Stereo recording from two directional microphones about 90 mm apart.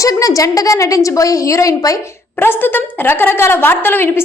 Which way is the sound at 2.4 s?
25° left (ahead or behind).